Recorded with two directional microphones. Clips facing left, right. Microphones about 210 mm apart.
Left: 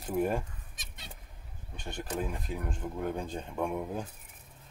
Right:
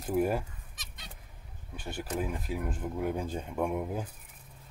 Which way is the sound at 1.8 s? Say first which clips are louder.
Right 1 dB; 5° right (ahead or behind).